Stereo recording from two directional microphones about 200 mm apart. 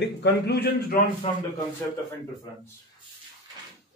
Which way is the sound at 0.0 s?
60° left (ahead or behind).